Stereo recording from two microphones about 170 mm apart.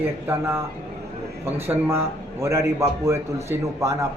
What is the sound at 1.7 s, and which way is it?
A man's voice, 15° right (ahead or behind).